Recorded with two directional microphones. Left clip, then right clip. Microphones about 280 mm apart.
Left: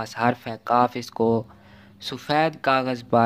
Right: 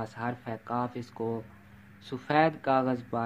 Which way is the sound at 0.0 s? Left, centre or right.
Left.